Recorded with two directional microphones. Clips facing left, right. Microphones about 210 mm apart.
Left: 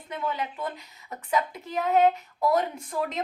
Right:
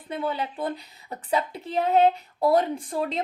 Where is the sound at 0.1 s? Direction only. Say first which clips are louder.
Right 3 dB; 30° right (ahead or behind).